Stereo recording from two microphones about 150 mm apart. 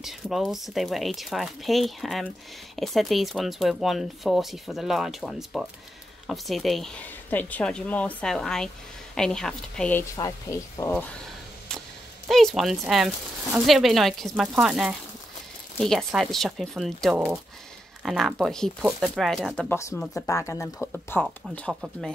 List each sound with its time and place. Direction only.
0.0 s speech: centre (ahead or behind)
10.1 s speech: 25° left (ahead or behind)
12.3 s speech: centre (ahead or behind)
19.7 s speech: 20° left (ahead or behind)